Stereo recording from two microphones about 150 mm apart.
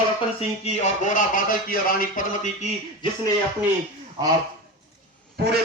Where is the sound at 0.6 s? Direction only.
55° left (ahead or behind).